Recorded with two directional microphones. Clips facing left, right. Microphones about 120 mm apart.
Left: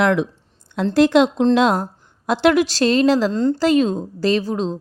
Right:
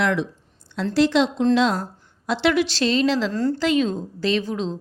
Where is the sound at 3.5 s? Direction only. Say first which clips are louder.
Left 4 dB; 40° left (ahead or behind).